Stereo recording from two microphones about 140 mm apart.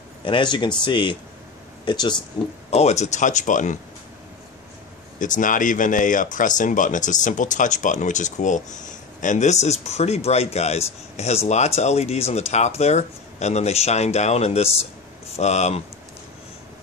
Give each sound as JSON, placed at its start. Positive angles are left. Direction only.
{"t": 0.2, "sound": "speech", "side_deg": 35}
{"t": 2.7, "sound": "speech", "side_deg": 50}
{"t": 5.2, "sound": "speech", "side_deg": 65}